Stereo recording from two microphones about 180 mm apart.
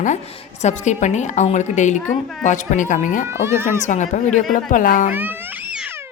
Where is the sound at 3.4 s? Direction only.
15° right (ahead or behind).